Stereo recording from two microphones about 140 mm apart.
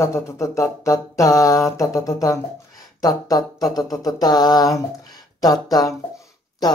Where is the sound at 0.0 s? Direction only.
20° left (ahead or behind).